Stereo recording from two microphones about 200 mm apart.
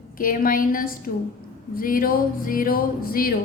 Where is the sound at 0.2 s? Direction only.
45° left (ahead or behind).